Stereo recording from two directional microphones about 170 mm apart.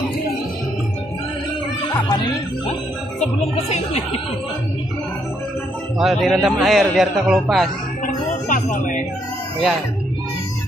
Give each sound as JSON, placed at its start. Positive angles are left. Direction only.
{"t": 3.2, "sound": "speech", "side_deg": 35}
{"t": 5.9, "sound": "a man's voice", "side_deg": 0}
{"t": 8.5, "sound": "music", "side_deg": 50}